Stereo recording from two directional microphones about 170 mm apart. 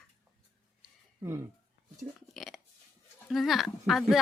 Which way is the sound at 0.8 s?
15° right (ahead or behind).